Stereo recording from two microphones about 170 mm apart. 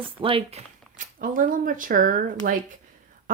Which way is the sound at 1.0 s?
50° right (ahead or behind).